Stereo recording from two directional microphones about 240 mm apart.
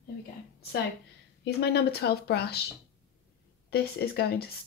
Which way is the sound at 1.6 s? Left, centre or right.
Left.